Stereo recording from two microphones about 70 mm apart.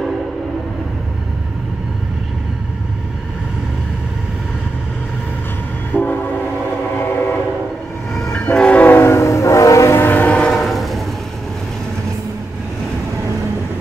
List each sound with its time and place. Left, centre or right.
5.9 s train: left
8.1 s train: centre
8.9 s train: left
9.9 s train: left
10.3 s train: centre
10.6 s train: centre